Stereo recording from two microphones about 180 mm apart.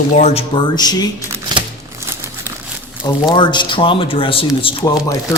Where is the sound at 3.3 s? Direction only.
25° left (ahead or behind).